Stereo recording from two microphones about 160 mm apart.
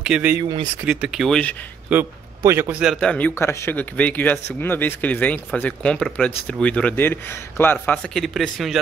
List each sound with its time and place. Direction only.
0.0 s speech: 10° right (ahead or behind)
0.4 s speech: 30° right (ahead or behind)
0.8 s speech: 5° right (ahead or behind)
1.9 s a man's voice: 15° right (ahead or behind)
2.8 s speech: centre (ahead or behind)